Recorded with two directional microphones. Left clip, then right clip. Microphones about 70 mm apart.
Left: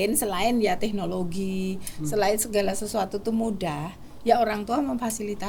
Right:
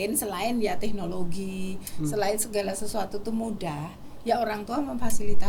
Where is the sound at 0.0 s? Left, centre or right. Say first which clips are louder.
Left 4 dB; left.